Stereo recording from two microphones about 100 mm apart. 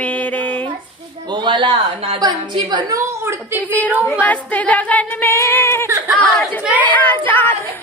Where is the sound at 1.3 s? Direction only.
50° right (ahead or behind).